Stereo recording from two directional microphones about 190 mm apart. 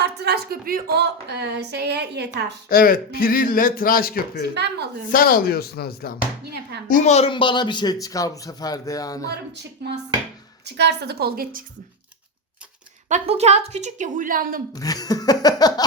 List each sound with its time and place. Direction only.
0.0 s speech: 60° right (ahead or behind)
2.6 s speech: 50° left (ahead or behind)
4.5 s speech: 60° right (ahead or behind)
5.1 s speech: 50° left (ahead or behind)
6.4 s speech: 60° right (ahead or behind)
6.8 s speech: 40° left (ahead or behind); by 9.3 s 20° left (ahead or behind)
10.8 s speech: 60° right (ahead or behind)
13.1 s a woman's voice: 35° right (ahead or behind)
14.8 s speech: 20° left (ahead or behind)